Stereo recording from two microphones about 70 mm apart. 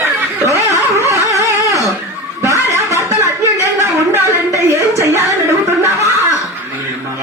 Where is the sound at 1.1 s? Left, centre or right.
Right.